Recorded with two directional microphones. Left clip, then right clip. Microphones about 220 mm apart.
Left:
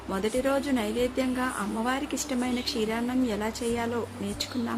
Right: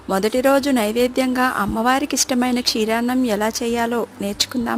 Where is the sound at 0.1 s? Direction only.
50° right (ahead or behind).